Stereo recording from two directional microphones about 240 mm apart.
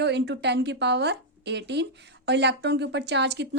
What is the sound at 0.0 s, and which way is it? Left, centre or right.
A woman's voice, right.